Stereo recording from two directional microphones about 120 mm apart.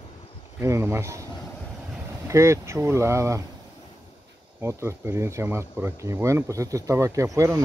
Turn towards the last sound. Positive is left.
turn(degrees=-25)  # may be behind; listen again after turning